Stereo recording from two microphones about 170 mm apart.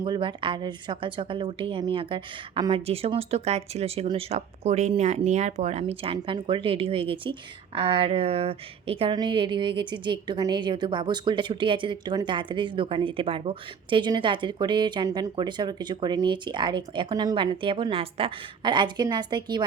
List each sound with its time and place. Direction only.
0.0 s a woman's voice: 30° right (ahead or behind)